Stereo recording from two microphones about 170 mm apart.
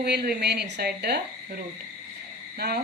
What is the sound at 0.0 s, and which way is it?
Speech, 70° right (ahead or behind).